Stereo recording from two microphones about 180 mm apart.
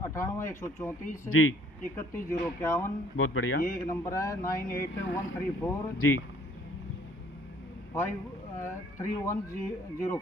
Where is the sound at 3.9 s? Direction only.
15° left (ahead or behind).